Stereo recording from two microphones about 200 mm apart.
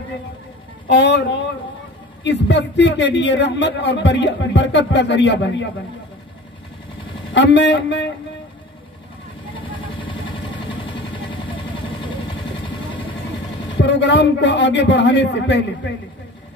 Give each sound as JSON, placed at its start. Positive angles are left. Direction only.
{"t": 0.8, "sound": "a man's voice", "side_deg": 60}
{"t": 2.2, "sound": "a man's voice", "side_deg": 60}
{"t": 7.3, "sound": "a man's voice", "side_deg": 60}
{"t": 9.6, "sound": "vehicle", "side_deg": 25}
{"t": 13.7, "sound": "a man's voice", "side_deg": 60}